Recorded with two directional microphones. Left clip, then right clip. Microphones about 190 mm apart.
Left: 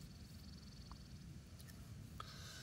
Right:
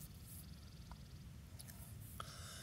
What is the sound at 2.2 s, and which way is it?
Writing, 5° right (ahead or behind).